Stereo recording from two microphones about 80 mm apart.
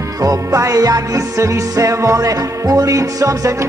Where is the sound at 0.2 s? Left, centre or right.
Right.